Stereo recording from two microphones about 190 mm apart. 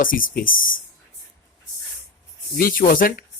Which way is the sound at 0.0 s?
45° left (ahead or behind).